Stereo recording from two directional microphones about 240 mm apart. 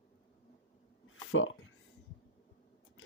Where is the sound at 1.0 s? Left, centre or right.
Left.